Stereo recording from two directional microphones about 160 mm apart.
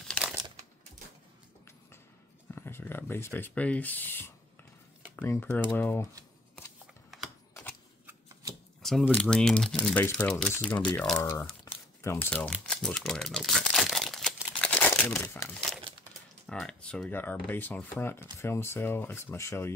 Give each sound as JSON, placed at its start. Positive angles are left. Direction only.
{"t": 2.5, "sound": "a sound", "side_deg": 15}
{"t": 5.1, "sound": "speech", "side_deg": 15}
{"t": 7.1, "sound": "typing", "side_deg": 0}
{"t": 9.0, "sound": "speech", "side_deg": 10}
{"t": 11.1, "sound": "speech", "side_deg": 20}
{"t": 11.6, "sound": "crumpling", "side_deg": 15}
{"t": 16.4, "sound": "speech", "side_deg": 5}